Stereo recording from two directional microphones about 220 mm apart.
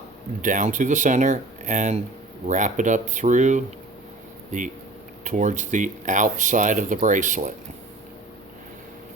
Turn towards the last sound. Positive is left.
turn(degrees=-35)  # may be behind; listen again after turning